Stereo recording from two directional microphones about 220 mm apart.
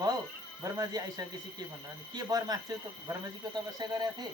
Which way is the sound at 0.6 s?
15° right (ahead or behind).